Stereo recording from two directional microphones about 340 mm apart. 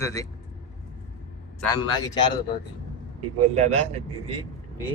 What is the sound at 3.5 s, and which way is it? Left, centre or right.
Speech, centre.